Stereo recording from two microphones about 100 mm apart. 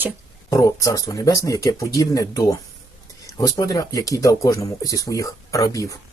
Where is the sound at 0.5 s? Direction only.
35° left (ahead or behind).